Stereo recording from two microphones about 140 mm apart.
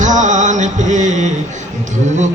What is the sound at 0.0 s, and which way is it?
Music, 60° right (ahead or behind).